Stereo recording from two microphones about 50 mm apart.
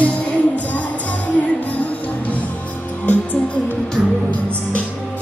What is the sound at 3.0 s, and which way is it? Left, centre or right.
Music, left.